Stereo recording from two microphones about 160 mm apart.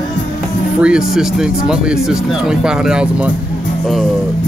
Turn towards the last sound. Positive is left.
turn(degrees=-5)  # may be behind; listen again after turning